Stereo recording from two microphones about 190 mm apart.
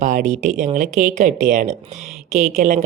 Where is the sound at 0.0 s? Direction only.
40° right (ahead or behind).